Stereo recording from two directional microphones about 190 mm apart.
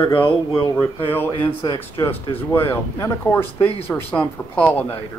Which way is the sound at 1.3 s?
25° left (ahead or behind).